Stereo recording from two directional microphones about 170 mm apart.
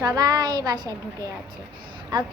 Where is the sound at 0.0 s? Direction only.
20° right (ahead or behind).